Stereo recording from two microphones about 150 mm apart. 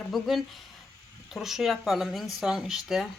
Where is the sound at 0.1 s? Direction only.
Centre (ahead or behind).